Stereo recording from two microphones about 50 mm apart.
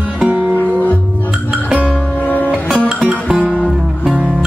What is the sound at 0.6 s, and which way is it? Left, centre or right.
Music, left.